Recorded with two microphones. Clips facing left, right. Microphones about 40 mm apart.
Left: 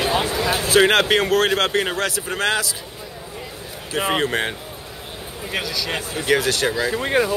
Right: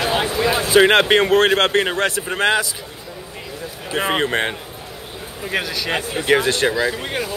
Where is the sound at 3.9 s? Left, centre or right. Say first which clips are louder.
Right 1 dB; centre.